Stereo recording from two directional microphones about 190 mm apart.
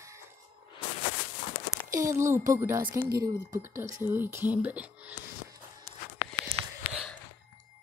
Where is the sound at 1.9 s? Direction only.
15° right (ahead or behind).